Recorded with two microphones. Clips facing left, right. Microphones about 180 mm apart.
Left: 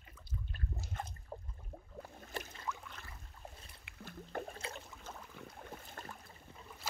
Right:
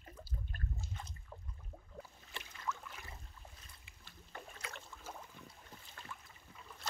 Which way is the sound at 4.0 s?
50° left (ahead or behind).